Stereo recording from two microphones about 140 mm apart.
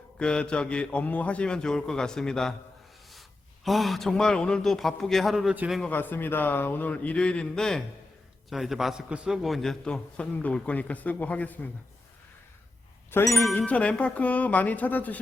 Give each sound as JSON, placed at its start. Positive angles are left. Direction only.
{"t": 0.2, "sound": "a man's voice", "side_deg": 5}
{"t": 3.6, "sound": "a man's voice", "side_deg": 0}
{"t": 5.9, "sound": "a man's voice", "side_deg": 15}
{"t": 13.1, "sound": "a man's voice", "side_deg": 20}